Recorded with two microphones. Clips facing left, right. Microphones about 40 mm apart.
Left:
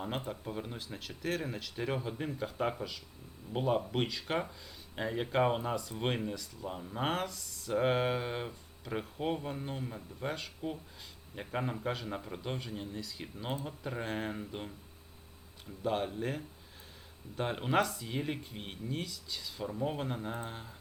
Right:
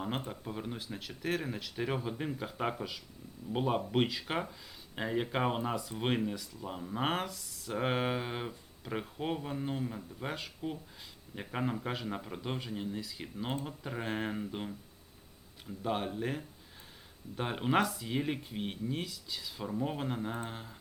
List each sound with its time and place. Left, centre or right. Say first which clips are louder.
0.3 s speech: even; centre
15.8 s speech: left 1 dB; centre